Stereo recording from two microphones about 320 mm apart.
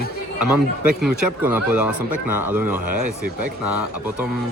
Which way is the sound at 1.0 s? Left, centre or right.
Centre.